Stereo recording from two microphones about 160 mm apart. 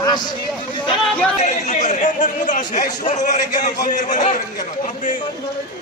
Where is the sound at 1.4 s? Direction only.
50° left (ahead or behind).